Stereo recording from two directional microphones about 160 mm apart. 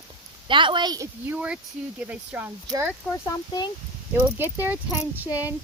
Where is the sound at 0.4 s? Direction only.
30° right (ahead or behind).